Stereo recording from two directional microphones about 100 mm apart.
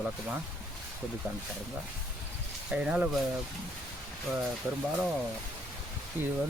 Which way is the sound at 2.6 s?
10° right (ahead or behind).